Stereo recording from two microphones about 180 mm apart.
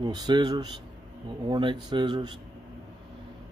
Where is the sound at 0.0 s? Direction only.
25° right (ahead or behind).